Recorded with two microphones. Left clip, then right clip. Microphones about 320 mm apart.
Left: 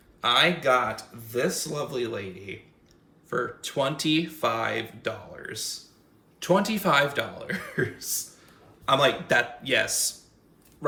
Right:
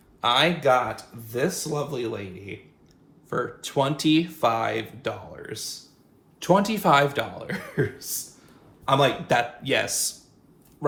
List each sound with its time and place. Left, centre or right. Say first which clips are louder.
0.2 s speech: right 1 dB; centre